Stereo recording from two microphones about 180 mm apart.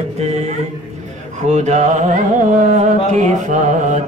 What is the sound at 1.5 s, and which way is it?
Mantra, 40° right (ahead or behind).